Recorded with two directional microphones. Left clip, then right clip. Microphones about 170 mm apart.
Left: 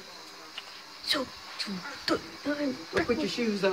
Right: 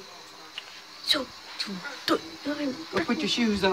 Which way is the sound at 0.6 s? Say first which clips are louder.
Right 3 dB; 5° right (ahead or behind).